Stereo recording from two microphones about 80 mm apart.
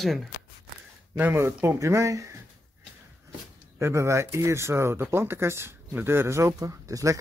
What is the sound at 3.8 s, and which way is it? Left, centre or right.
Speech, right.